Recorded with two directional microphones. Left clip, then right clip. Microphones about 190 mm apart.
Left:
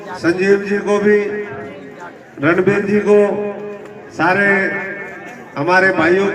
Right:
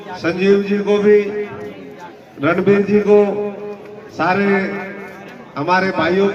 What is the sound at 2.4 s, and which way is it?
A man's voice, centre (ahead or behind).